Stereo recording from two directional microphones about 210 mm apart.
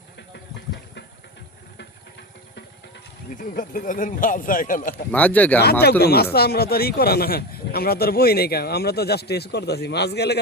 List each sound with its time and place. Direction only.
3.3 s speech: 40° left (ahead or behind)
5.1 s speech: 5° left (ahead or behind)
6.0 s speech: 50° left (ahead or behind)